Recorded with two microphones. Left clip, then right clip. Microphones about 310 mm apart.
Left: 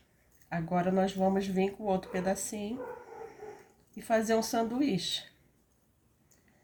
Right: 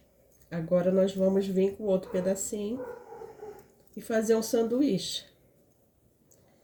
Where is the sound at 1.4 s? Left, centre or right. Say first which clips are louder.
Right 4 dB; right.